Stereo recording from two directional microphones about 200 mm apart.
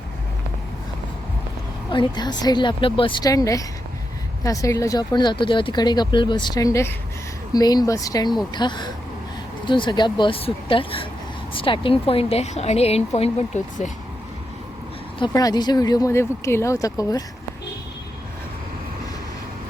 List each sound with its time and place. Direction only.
1.9 s speech: 20° left (ahead or behind)
15.2 s speech: 20° left (ahead or behind)